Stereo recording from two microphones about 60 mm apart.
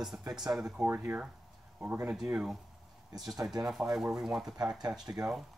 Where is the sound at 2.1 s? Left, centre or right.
Centre.